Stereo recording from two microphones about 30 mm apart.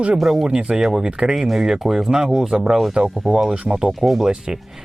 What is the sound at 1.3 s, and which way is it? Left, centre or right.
Speech, centre.